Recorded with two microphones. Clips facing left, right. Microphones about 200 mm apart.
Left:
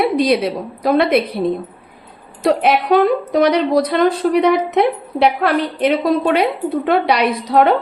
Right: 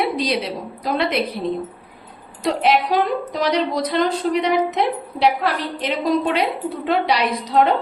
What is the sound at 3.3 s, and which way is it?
A woman's voice, 60° left (ahead or behind).